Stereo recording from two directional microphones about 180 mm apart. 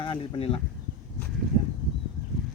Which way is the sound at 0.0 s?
30° left (ahead or behind).